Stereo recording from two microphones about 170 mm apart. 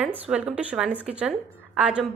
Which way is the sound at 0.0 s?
5° right (ahead or behind).